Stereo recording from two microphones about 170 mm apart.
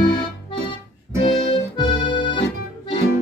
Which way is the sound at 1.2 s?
30° left (ahead or behind).